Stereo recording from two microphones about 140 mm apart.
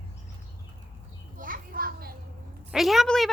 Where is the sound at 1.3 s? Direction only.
75° right (ahead or behind).